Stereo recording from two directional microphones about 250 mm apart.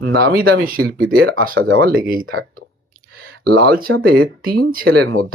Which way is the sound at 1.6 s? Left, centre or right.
Right.